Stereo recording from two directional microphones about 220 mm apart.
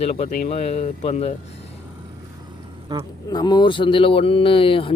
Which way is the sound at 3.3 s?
20° left (ahead or behind).